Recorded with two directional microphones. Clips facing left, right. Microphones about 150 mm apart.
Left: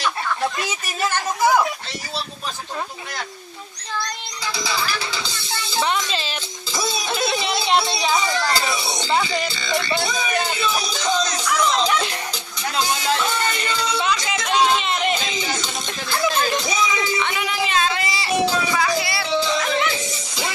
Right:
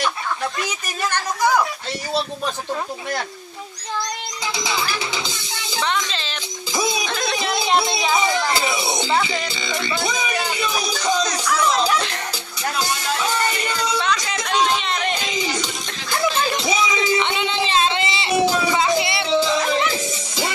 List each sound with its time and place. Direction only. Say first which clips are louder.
4.5 s music: even; 20° right (ahead or behind)
5.8 s speech: left 1 dB; 10° left (ahead or behind)
6.7 s music: right 3 dB; 15° right (ahead or behind)
7.1 s music: left 2 dB; 10° left (ahead or behind)
8.1 s speech: right 2 dB; 20° right (ahead or behind)
9.1 s speech: left 3 dB; 5° left (ahead or behind)
9.8 s music: even; 20° right (ahead or behind)
13.1 s music: right 1 dB; 10° right (ahead or behind)
14.4 s chatter: left 2 dB; 5° left (ahead or behind)
16.6 s a sound: right 2 dB; 20° right (ahead or behind)
19.6 s music: right 1 dB; 35° right (ahead or behind)